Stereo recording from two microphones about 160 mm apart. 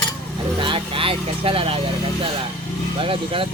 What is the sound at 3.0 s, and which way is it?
Speech, 35° right (ahead or behind).